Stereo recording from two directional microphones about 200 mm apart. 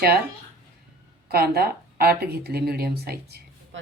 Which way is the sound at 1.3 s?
50° right (ahead or behind).